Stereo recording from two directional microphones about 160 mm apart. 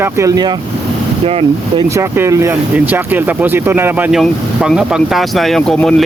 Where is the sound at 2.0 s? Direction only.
15° right (ahead or behind); by 5.9 s 5° left (ahead or behind).